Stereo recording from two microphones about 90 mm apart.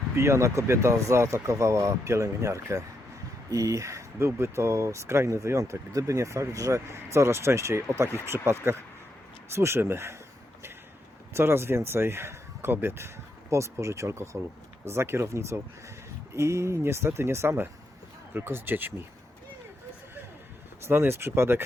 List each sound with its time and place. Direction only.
0.2 s speech: 30° right (ahead or behind)
11.3 s speech: 30° right (ahead or behind)
20.8 s speech: 25° right (ahead or behind)